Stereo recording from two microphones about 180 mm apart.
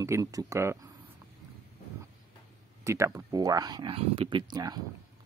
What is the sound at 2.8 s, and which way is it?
Speech, 15° right (ahead or behind).